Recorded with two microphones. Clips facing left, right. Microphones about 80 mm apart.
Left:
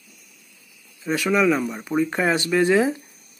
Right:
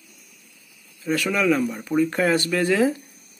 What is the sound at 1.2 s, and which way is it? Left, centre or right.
Speech, centre.